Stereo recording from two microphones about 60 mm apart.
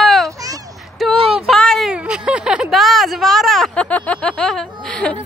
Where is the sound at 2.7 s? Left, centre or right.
Centre.